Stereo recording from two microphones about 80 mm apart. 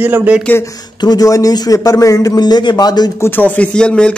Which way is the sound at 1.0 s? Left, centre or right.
Left.